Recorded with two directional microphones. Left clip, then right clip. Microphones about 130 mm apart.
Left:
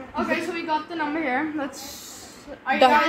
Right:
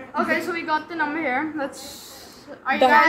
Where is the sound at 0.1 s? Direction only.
5° left (ahead or behind).